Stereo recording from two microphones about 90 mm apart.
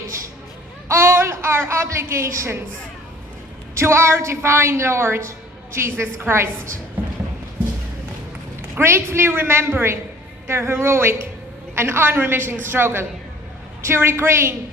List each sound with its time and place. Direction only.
0.9 s a sound: 30° right (ahead or behind)
3.8 s a woman's voice: 30° right (ahead or behind)
8.8 s a woman's voice: 30° right (ahead or behind)